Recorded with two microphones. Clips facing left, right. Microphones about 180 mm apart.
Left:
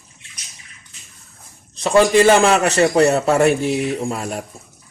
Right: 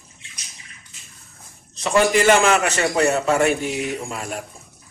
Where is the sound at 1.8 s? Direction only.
30° left (ahead or behind).